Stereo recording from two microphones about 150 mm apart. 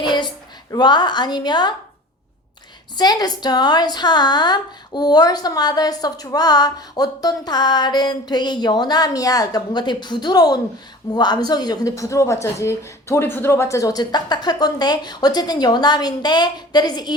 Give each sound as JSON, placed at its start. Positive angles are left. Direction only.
{"t": 0.0, "sound": "a sound", "side_deg": 30}
{"t": 0.7, "sound": "a woman's voice", "side_deg": 30}
{"t": 2.9, "sound": "a woman's voice", "side_deg": 25}